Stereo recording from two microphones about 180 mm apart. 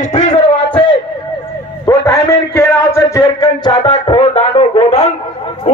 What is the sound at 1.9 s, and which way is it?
A man's voice, 15° left (ahead or behind).